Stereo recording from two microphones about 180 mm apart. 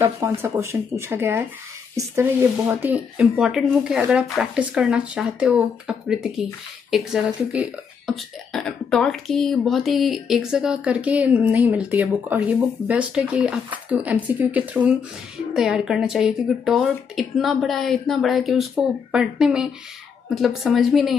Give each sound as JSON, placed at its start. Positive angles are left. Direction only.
{"t": 0.0, "sound": "speech", "side_deg": -15}